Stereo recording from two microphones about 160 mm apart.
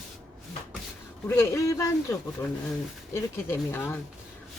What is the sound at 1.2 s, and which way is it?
Speech, 15° left (ahead or behind).